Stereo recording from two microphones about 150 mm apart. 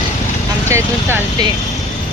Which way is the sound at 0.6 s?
15° right (ahead or behind).